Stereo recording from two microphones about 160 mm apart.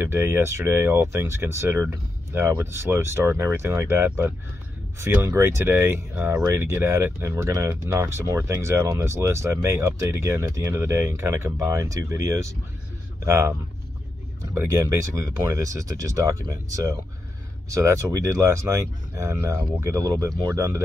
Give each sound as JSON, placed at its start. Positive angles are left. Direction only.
{"t": 0.0, "sound": "speech", "side_deg": -15}
{"t": 15.1, "sound": "speech", "side_deg": -20}